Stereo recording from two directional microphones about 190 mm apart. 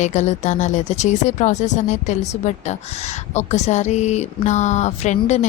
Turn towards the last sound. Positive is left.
turn(degrees=40)  # may be behind; listen again after turning